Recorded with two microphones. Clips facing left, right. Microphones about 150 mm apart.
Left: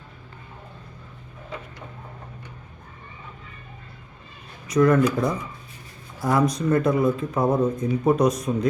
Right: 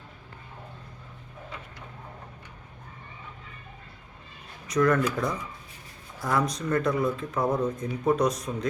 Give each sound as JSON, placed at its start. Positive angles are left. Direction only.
{"t": 4.7, "sound": "speech", "side_deg": 10}
{"t": 7.4, "sound": "speech", "side_deg": 25}
{"t": 8.0, "sound": "speech", "side_deg": 10}